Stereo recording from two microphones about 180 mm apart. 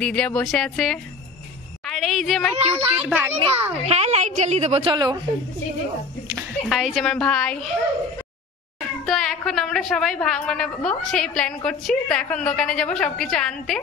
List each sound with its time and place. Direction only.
0.0 s a woman's voice: 5° left (ahead or behind)
3.9 s a woman's voice: 35° right (ahead or behind)
4.9 s a woman's voice: 25° right (ahead or behind)
6.7 s a woman's voice: centre (ahead or behind)
9.0 s a woman's voice: centre (ahead or behind)